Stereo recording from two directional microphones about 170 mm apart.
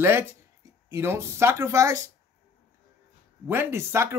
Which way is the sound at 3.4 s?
15° right (ahead or behind).